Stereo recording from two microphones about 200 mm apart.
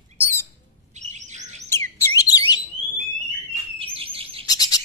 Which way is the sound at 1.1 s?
35° right (ahead or behind).